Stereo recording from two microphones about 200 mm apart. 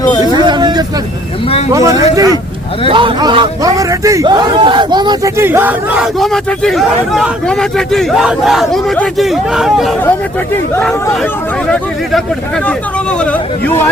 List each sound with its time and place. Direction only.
0.3 s hubbub: 20° right (ahead or behind)
1.5 s speech: 30° left (ahead or behind)
1.7 s a man's voice: 15° right (ahead or behind); by 11.3 s 5° left (ahead or behind)
12.6 s speech: 5° left (ahead or behind)